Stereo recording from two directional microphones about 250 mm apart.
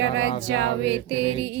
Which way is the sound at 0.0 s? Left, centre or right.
Right.